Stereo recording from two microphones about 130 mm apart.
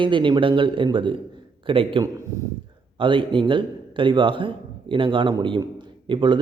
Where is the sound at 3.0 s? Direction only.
40° right (ahead or behind).